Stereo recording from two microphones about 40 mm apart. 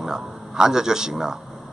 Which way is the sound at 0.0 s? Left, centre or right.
Centre.